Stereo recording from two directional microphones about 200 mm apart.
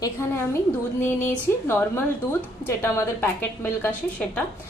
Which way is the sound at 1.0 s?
10° left (ahead or behind).